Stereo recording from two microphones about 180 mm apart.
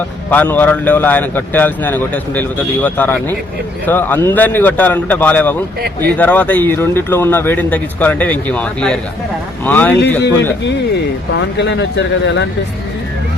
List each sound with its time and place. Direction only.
0.3 s a man's voice: 10° left (ahead or behind)
5.8 s speech: 60° right (ahead or behind)
6.1 s a man's voice: 10° left (ahead or behind)
11.3 s speech: 75° left (ahead or behind)